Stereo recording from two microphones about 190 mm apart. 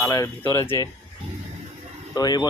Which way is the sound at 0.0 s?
15° left (ahead or behind).